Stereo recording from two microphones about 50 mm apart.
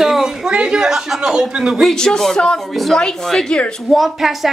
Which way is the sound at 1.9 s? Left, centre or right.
Centre.